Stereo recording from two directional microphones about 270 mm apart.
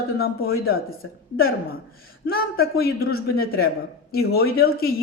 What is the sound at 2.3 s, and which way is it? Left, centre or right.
Speech, left.